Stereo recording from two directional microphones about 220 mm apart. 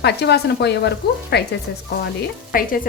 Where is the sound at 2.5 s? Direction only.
40° left (ahead or behind).